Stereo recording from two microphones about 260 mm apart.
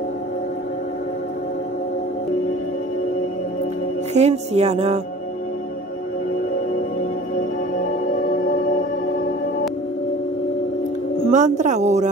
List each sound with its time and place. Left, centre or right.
4.1 s speech: right
11.2 s speech: right